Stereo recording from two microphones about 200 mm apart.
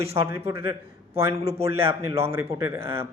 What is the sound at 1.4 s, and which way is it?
Speech, 30° right (ahead or behind).